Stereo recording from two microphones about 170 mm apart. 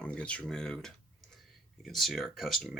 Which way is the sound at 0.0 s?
5° left (ahead or behind).